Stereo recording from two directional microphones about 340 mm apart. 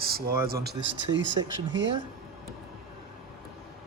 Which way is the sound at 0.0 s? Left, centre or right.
Right.